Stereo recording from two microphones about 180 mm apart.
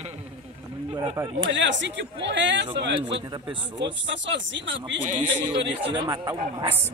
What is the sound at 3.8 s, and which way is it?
Speech, 85° right.